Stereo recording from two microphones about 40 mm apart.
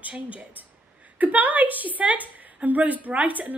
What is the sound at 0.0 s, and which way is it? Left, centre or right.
Speech, right.